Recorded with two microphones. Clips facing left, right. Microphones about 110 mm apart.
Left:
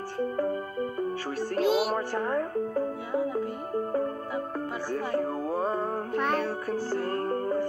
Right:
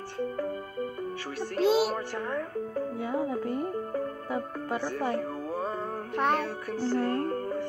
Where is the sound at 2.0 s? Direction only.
40° left (ahead or behind).